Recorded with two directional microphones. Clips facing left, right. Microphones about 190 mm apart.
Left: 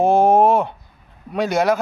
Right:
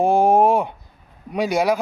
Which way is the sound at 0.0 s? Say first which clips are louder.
Left 1 dB; 10° right (ahead or behind).